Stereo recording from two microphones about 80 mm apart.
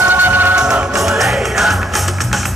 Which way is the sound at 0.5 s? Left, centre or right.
Centre.